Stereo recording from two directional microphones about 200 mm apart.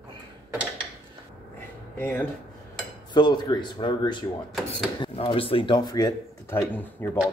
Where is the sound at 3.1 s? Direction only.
20° left (ahead or behind).